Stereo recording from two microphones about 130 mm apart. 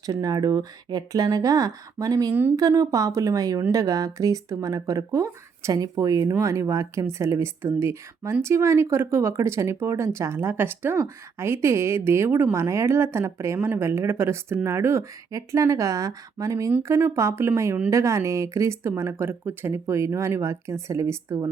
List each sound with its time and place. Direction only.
0.0 s speech: 30° right (ahead or behind)